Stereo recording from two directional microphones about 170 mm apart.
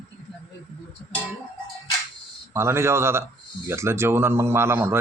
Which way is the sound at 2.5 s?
15° right (ahead or behind).